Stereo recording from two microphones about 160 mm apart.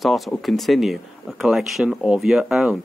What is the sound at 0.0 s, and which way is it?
Speech, centre (ahead or behind).